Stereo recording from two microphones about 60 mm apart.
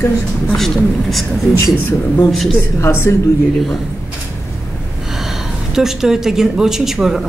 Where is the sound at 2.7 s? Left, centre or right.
Left.